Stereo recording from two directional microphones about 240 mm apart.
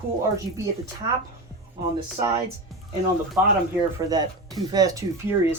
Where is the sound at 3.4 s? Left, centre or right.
Centre.